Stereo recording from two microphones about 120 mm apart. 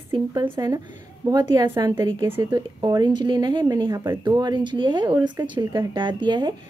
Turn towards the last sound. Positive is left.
turn(degrees=-40)  # may be behind; listen again after turning